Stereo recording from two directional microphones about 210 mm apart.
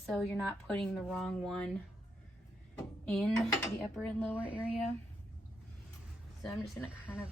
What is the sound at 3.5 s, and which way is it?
Speech, 15° left (ahead or behind).